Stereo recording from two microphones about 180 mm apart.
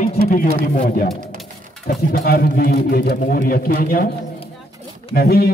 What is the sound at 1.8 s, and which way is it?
A man's voice, 55° left (ahead or behind).